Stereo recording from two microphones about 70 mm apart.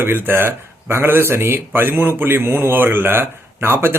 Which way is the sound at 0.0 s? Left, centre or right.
Right.